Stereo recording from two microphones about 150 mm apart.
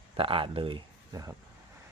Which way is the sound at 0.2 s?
35° right (ahead or behind).